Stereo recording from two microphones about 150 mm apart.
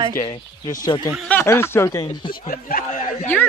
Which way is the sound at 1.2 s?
15° left (ahead or behind).